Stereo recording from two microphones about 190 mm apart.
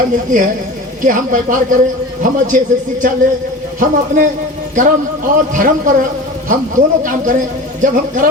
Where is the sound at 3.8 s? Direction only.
45° right (ahead or behind).